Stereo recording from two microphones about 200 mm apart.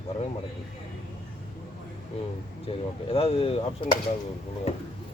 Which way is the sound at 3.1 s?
30° left (ahead or behind).